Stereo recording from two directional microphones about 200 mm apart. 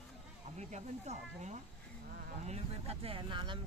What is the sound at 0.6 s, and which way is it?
Speech, 35° right (ahead or behind).